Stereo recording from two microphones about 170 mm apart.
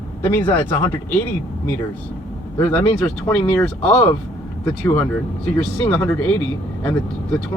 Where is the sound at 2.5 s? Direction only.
5° left (ahead or behind).